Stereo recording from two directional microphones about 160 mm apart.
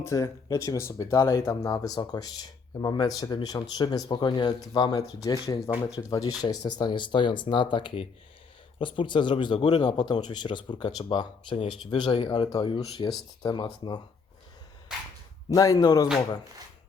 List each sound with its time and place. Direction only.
0.0 s speech: 20° left (ahead or behind)
15.4 s speech: 20° left (ahead or behind)